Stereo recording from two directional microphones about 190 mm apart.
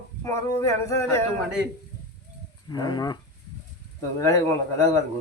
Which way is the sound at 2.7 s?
20° left (ahead or behind).